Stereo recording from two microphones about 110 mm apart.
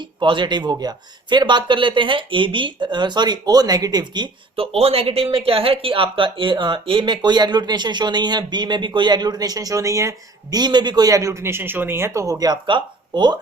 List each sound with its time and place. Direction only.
0.2 s speech: 45° right (ahead or behind)
4.5 s speech: 60° right (ahead or behind); by 13.4 s 40° right (ahead or behind)